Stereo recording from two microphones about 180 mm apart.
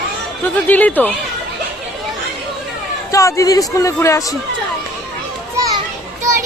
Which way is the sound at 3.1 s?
20° left (ahead or behind).